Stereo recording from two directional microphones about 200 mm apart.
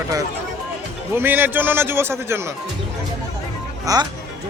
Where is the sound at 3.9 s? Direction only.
15° right (ahead or behind).